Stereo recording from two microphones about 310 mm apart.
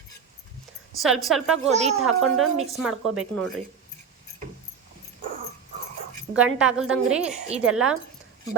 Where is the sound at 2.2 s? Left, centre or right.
Right.